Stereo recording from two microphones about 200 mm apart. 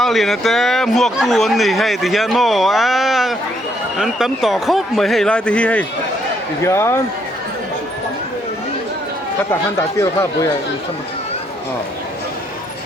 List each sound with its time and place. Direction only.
0.0 s a man's voice: centre (ahead or behind)
9.5 s speech: 15° left (ahead or behind)